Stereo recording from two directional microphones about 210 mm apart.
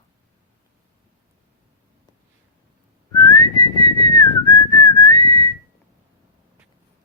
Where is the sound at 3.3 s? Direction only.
20° left (ahead or behind).